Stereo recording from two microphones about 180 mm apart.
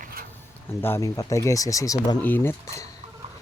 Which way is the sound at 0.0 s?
55° right (ahead or behind).